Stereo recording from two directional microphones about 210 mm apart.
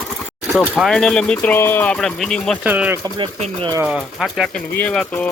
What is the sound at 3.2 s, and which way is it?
Speech, 30° right (ahead or behind).